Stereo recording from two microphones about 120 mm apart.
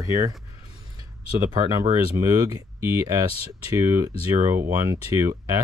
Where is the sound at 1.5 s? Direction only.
30° right (ahead or behind).